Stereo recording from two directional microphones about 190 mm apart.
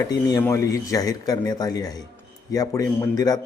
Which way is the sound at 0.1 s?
20° left (ahead or behind).